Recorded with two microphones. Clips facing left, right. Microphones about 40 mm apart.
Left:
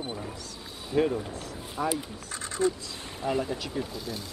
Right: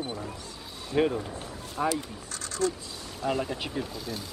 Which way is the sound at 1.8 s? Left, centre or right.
Centre.